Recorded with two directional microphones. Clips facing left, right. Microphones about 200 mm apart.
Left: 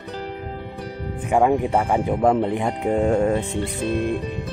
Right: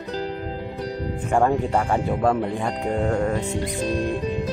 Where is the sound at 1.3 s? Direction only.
10° left (ahead or behind).